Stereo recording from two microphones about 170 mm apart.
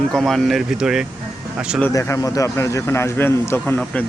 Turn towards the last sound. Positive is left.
turn(degrees=10)  # may be behind; listen again after turning